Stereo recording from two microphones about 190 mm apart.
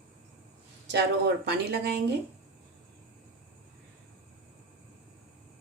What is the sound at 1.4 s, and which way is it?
Speech, 60° right (ahead or behind).